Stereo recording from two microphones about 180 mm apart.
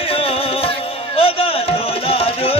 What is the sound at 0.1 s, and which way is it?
Music, 30° left (ahead or behind).